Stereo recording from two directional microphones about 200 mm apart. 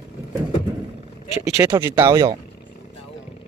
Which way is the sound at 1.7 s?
10° right (ahead or behind).